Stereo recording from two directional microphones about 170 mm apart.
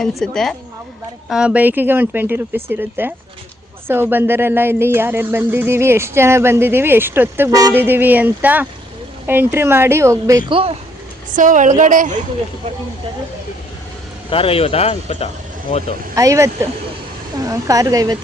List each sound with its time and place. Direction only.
0.2 s a woman's voice: 5° left (ahead or behind); by 10.3 s 15° right (ahead or behind)
10.5 s speech: 35° right (ahead or behind)
11.3 s a woman's voice: 50° right (ahead or behind)
14.3 s speech: 35° left (ahead or behind)
16.1 s a woman's voice: 20° right (ahead or behind)